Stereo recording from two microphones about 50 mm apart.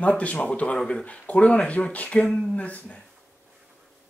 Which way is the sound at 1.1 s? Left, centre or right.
Left.